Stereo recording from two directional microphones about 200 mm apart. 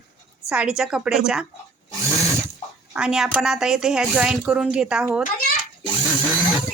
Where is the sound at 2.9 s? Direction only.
5° right (ahead or behind).